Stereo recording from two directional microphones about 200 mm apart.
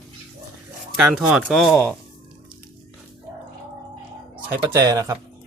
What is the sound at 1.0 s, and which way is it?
Speech, 5° right (ahead or behind).